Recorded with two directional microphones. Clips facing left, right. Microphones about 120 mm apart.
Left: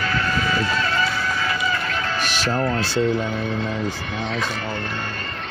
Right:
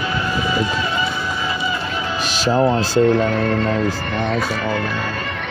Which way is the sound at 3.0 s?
65° right (ahead or behind).